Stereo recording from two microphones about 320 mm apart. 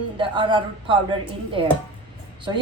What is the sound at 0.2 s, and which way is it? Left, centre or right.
Speech, centre.